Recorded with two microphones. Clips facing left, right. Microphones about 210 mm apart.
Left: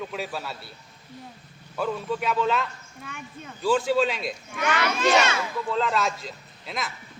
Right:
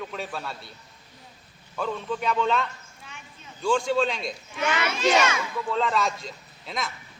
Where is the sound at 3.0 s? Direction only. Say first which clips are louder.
Left 8 dB; 55° left (ahead or behind).